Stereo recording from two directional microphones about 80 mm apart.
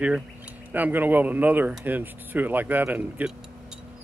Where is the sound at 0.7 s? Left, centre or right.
Right.